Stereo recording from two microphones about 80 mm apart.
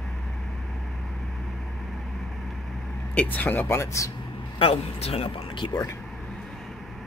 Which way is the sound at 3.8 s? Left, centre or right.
Left.